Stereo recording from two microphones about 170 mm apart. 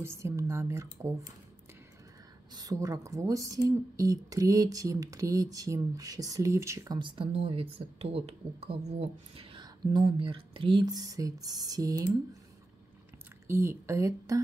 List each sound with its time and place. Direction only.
0.0 s speech: 15° right (ahead or behind)
2.5 s speech: 20° right (ahead or behind)
13.5 s speech: 15° right (ahead or behind)